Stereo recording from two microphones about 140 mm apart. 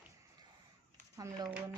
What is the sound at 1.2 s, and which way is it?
Speech, 25° right (ahead or behind).